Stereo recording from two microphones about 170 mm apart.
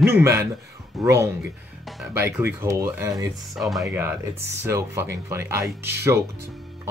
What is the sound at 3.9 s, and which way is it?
Speech, 10° right (ahead or behind).